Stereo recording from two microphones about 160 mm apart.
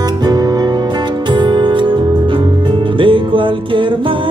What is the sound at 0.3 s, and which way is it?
Music, 25° right (ahead or behind).